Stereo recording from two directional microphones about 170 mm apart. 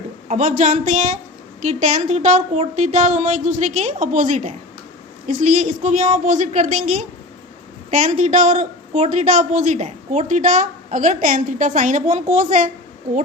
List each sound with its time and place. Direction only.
0.3 s a woman's voice: 50° right (ahead or behind)